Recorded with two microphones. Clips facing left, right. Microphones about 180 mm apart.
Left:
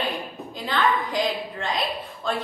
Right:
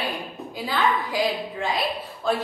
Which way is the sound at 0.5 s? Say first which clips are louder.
Even; 10° right (ahead or behind).